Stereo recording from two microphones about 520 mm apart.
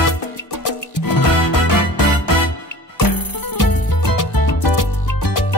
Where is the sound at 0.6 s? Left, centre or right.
Left.